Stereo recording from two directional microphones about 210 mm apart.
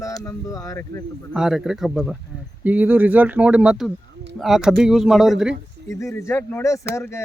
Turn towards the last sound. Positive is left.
turn(degrees=10)  # may be behind; listen again after turning